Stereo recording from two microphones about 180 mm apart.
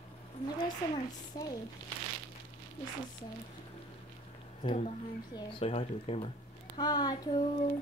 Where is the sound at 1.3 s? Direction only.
20° left (ahead or behind).